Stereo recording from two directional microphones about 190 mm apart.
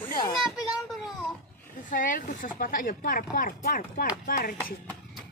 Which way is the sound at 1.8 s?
45° left (ahead or behind).